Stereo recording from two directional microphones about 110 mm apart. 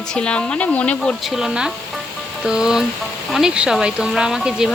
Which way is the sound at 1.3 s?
5° right (ahead or behind).